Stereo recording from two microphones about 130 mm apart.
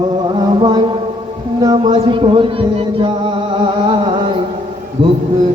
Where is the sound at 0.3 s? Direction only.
35° right (ahead or behind).